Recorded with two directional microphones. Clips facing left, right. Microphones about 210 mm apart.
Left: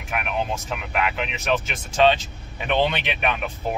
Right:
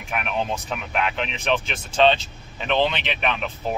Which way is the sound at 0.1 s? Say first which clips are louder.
Even; centre (ahead or behind).